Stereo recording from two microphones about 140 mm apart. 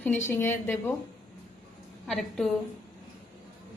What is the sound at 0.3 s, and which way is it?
Speech, 15° left (ahead or behind).